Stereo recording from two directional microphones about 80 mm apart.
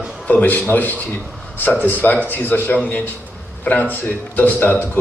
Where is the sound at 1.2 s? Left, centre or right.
Centre.